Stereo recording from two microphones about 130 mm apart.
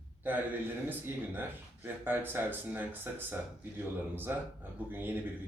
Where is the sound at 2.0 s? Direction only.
15° right (ahead or behind).